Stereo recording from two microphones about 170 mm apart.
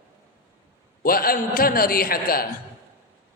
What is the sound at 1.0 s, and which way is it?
A man's voice, 60° left (ahead or behind).